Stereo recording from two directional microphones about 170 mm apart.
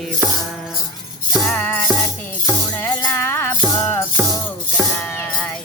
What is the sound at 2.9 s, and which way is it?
Music, 15° left (ahead or behind).